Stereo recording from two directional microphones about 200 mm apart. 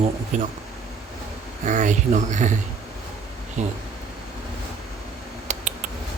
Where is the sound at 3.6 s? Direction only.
35° right (ahead or behind).